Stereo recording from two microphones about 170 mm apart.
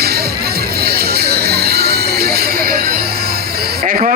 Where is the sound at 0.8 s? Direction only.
65° right (ahead or behind).